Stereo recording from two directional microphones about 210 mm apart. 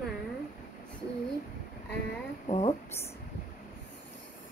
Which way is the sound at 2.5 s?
30° left (ahead or behind).